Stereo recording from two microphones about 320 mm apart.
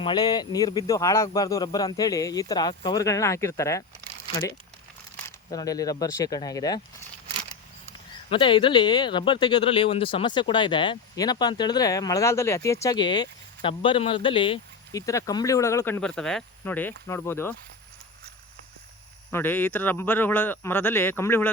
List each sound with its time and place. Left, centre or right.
0.0 s speech: centre
5.5 s speech: centre
8.3 s speech: centre
19.3 s speech: centre